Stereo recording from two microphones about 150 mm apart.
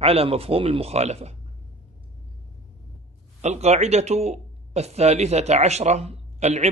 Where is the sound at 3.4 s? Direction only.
45° right (ahead or behind).